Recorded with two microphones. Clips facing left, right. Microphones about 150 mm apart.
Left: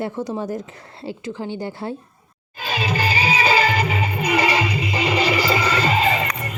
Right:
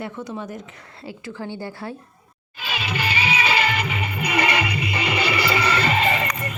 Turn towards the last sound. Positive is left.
turn(degrees=30)  # may be behind; listen again after turning